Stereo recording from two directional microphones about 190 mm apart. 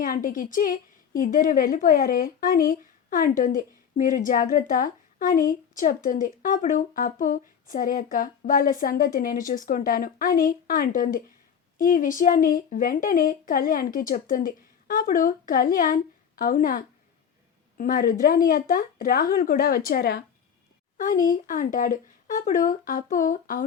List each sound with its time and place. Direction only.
0.0 s a woman's voice: 45° left (ahead or behind)